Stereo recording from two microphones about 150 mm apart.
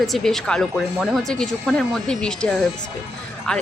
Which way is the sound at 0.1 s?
5° left (ahead or behind).